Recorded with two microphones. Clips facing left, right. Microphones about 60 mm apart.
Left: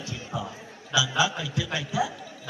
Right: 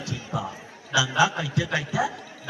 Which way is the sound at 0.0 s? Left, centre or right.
Right.